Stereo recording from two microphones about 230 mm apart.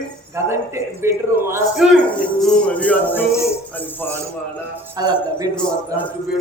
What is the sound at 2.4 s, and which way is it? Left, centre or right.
Music, centre.